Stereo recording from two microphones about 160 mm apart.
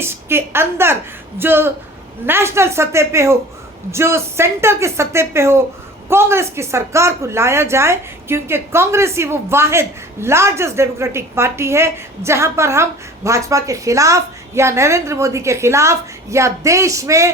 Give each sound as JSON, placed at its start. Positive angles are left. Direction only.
{"t": 0.0, "sound": "a woman's voice", "side_deg": -15}